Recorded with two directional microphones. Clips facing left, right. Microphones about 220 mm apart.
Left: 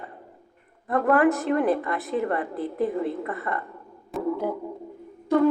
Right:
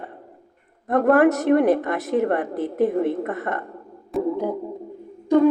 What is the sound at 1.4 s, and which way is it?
Speech, 70° right (ahead or behind).